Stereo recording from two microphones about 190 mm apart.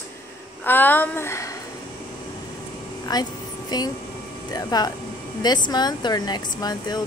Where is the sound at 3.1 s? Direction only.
20° left (ahead or behind).